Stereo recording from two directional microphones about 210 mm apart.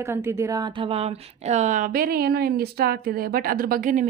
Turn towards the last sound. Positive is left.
turn(degrees=-40)  # may be behind; listen again after turning